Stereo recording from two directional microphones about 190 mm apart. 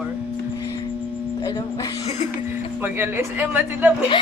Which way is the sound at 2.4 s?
10° right (ahead or behind).